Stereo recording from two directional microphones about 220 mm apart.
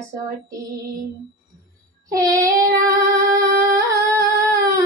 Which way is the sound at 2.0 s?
15° right (ahead or behind).